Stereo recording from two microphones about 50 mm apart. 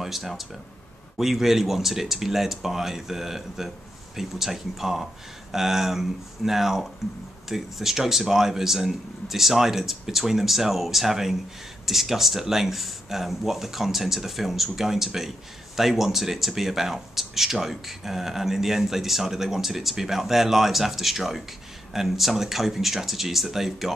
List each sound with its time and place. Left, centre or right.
0.0 s speech: centre